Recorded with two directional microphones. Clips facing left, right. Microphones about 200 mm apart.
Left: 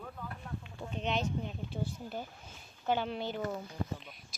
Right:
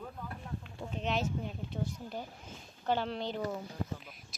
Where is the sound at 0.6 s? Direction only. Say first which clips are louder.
Even; centre (ahead or behind).